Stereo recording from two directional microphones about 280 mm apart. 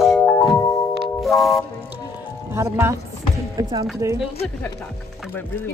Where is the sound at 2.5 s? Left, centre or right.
Centre.